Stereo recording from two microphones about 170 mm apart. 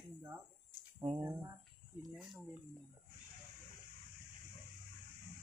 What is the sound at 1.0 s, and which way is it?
Speech, 20° right (ahead or behind).